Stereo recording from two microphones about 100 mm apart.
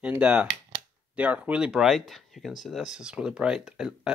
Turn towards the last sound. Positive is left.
turn(degrees=-5)  # may be behind; listen again after turning